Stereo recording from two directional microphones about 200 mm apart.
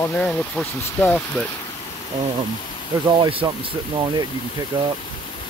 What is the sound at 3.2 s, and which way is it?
Speech, 25° right (ahead or behind).